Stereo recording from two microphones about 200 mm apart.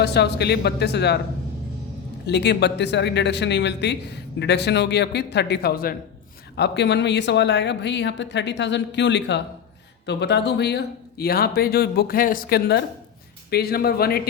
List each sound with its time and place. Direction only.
0.0 s speech: 55° left (ahead or behind)
2.2 s speech: 55° left (ahead or behind)
6.6 s speech: 60° left (ahead or behind)